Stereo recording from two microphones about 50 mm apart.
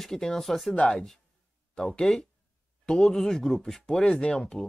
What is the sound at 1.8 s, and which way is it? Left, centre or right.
Speech, centre.